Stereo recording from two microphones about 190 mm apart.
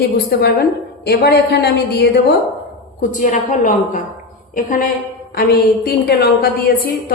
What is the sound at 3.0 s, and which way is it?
A woman's voice, 40° left (ahead or behind).